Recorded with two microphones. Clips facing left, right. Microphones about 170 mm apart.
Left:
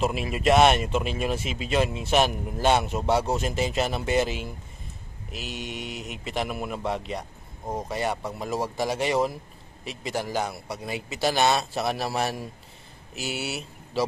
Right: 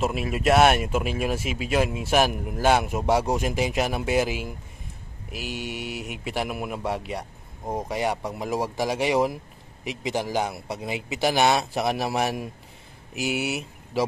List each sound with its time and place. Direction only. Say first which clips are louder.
0.0 s speech: even; centre (ahead or behind)